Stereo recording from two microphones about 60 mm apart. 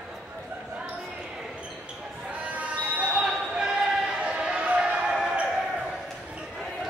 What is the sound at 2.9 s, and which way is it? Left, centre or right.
Basketball bounce, right.